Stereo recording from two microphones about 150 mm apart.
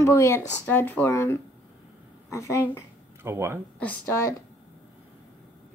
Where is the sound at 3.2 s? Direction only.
15° right (ahead or behind).